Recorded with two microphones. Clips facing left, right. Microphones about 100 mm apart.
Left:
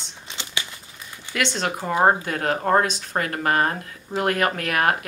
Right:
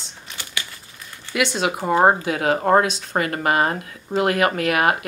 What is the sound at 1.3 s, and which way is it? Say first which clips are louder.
Speech: right 3 dB; 5° right (ahead or behind).